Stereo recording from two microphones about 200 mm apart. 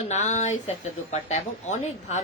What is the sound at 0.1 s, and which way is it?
A woman's voice, 35° left (ahead or behind).